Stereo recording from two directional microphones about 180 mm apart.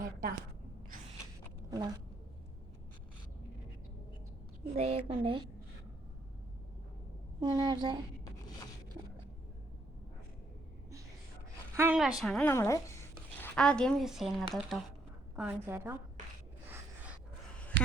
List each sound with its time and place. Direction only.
0.0 s a sound: 55° right (ahead or behind)
4.7 s a woman's voice: 35° right (ahead or behind)
7.4 s a woman's voice: 25° right (ahead or behind)
11.7 s a woman's voice: 15° right (ahead or behind)
11.9 s a woman's voice: centre (ahead or behind); by 13.0 s 15° left (ahead or behind)
13.4 s speech: 5° left (ahead or behind)
15.4 s a woman's voice: 10° right (ahead or behind)
17.7 s a sound: 80° right